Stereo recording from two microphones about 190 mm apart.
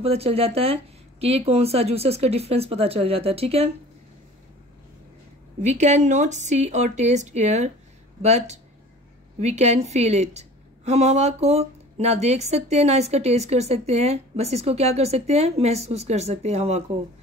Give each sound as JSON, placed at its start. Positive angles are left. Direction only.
{"t": 0.0, "sound": "speech", "side_deg": -30}
{"t": 5.6, "sound": "speech", "side_deg": -40}